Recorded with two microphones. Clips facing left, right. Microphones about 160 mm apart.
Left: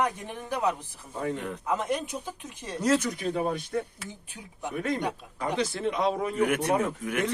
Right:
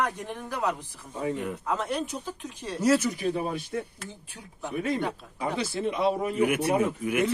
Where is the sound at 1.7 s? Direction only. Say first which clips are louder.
Left 2 dB; 15° left (ahead or behind).